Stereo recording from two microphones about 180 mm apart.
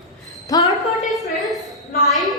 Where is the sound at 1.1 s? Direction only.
Centre (ahead or behind).